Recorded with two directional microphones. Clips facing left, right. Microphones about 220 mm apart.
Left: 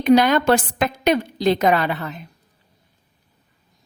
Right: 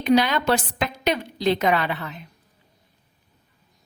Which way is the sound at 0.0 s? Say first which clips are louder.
Left 4 dB; 50° left (ahead or behind).